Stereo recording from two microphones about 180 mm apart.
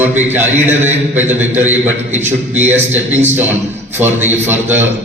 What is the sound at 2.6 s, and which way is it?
Speech, 40° right (ahead or behind).